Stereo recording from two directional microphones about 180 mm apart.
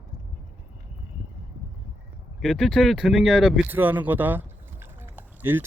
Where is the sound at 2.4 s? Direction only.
Centre (ahead or behind).